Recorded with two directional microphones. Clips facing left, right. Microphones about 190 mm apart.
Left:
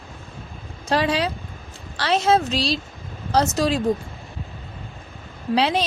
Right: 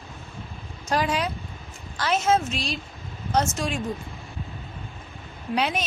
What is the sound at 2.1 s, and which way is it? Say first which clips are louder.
Speech: left 4 dB; 35° left (ahead or behind).